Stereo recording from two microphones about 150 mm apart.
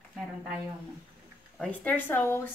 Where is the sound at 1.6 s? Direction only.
10° left (ahead or behind).